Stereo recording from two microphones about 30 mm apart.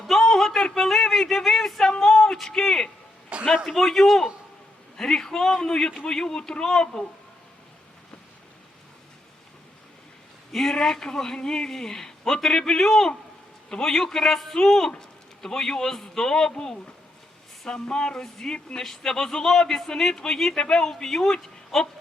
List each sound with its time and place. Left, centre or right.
0.1 s a sound: centre
3.3 s a sound: right
3.7 s speech: centre
4.9 s a man's voice: centre
10.5 s a man's voice: centre
18.2 s a man's voice: centre